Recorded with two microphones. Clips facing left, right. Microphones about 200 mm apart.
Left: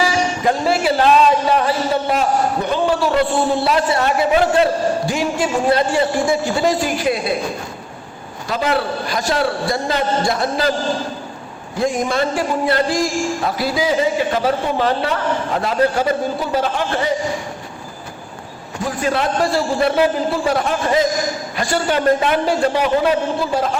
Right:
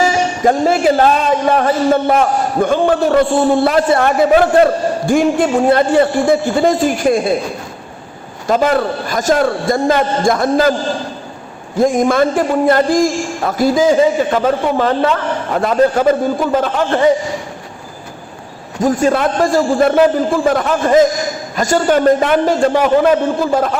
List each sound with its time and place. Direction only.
0.0 s a man's voice: 45° right (ahead or behind)
8.4 s a man's voice: 45° right (ahead or behind)
11.8 s a man's voice: 50° right (ahead or behind)
18.8 s a man's voice: 45° right (ahead or behind)